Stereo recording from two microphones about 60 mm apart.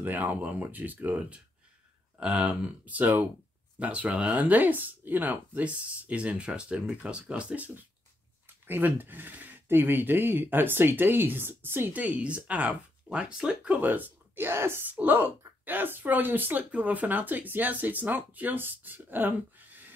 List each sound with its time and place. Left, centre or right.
0.0 s speech: right
11.9 s speech: right
13.7 s speech: right
15.0 s speech: right